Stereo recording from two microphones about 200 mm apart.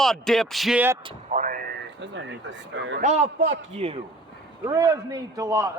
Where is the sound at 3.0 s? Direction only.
35° right (ahead or behind).